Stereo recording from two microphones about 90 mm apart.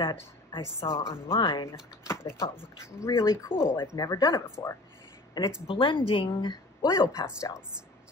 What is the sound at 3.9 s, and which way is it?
Speech, 45° left (ahead or behind).